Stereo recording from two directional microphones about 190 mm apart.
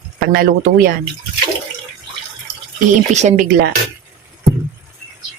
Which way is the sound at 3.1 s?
40° right (ahead or behind).